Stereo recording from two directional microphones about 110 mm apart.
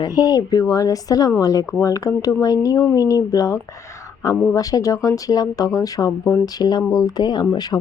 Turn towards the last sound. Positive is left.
turn(degrees=40)  # may be behind; listen again after turning